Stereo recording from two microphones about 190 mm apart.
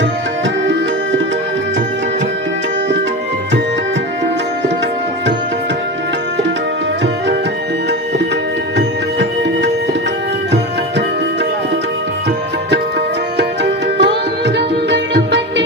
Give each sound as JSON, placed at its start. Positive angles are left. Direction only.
{"t": 13.7, "sound": "music", "side_deg": -65}